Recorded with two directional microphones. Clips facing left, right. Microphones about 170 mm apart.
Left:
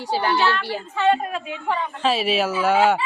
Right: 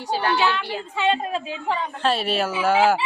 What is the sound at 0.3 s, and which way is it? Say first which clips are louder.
A woman's voice: left 1 dB; 15° right (ahead or behind).